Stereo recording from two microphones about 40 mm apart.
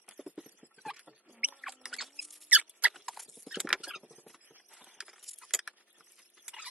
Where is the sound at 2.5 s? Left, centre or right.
Right.